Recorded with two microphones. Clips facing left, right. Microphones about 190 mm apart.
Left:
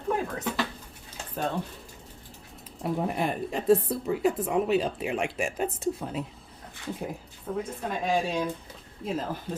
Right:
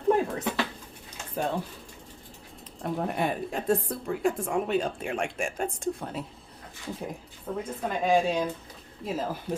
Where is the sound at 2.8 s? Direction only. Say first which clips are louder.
Left 1 dB; 5° left (ahead or behind).